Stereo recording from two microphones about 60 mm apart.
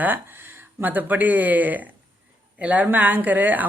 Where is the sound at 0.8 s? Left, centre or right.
Right.